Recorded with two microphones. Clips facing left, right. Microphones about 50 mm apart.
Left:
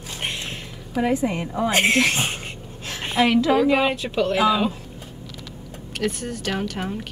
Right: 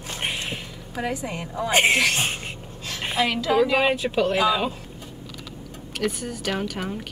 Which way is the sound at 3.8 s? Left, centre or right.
Centre.